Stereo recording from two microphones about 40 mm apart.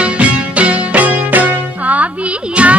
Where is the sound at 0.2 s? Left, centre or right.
Right.